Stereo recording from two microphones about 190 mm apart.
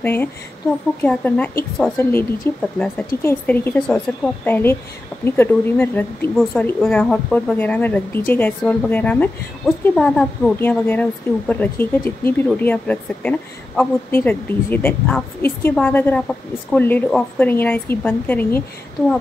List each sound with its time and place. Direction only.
0.0 s a woman's voice: 10° left (ahead or behind)